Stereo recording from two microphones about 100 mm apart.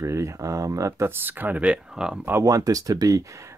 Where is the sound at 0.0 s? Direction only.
30° right (ahead or behind); by 2.1 s 10° right (ahead or behind).